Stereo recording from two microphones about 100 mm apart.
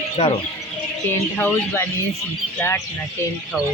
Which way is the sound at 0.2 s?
90° left.